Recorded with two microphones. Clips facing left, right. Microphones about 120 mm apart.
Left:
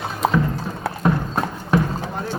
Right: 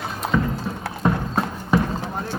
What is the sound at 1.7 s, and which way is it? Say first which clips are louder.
Clip-clop: left 1 dB; centre (ahead or behind).